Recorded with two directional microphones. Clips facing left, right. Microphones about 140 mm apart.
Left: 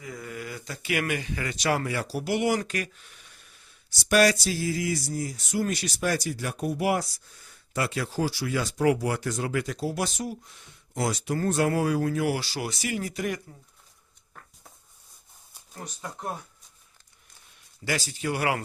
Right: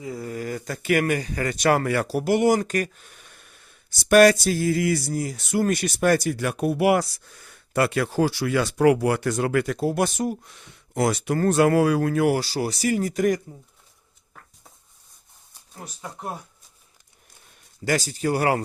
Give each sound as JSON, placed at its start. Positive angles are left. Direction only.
{"t": 0.0, "sound": "speech", "side_deg": -30}
{"t": 10.5, "sound": "speech", "side_deg": -70}
{"t": 15.7, "sound": "speech", "side_deg": 0}
{"t": 17.8, "sound": "speech", "side_deg": -40}